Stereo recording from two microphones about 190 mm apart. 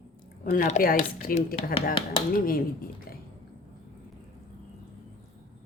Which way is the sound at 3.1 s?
50° left (ahead or behind).